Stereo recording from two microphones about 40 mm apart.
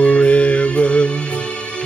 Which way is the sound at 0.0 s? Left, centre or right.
Left.